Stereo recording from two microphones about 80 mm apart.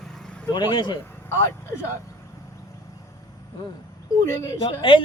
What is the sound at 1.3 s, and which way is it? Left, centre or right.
Speech, left.